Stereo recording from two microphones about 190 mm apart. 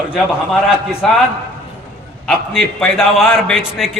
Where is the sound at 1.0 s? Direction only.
Centre (ahead or behind).